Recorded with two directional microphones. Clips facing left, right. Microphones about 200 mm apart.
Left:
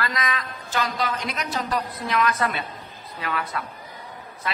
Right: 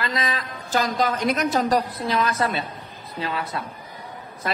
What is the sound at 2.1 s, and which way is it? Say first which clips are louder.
A woman's voice: even; 30° right (ahead or behind).